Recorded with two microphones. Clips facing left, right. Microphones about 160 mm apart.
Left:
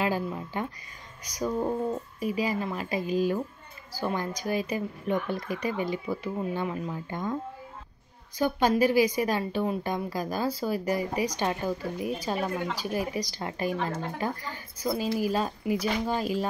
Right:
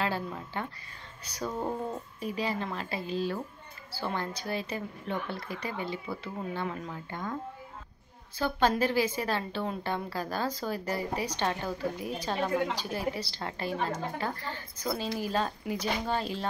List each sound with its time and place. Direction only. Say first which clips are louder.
0.0 s a woman's voice: left 4 dB; 15° left (ahead or behind)
8.4 s a woman's voice: left 3 dB; 10° left (ahead or behind)